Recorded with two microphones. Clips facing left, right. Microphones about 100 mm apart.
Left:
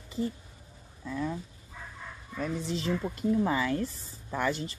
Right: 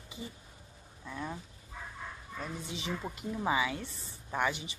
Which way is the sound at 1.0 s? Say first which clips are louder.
Left 7 dB; 20° right (ahead or behind).